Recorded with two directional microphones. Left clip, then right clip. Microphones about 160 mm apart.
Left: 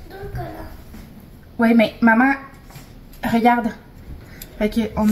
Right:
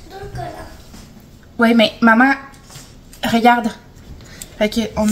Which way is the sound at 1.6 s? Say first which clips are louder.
Right 3 dB; 15° right (ahead or behind).